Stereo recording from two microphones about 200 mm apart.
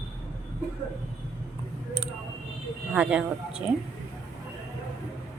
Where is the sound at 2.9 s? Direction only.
5° right (ahead or behind).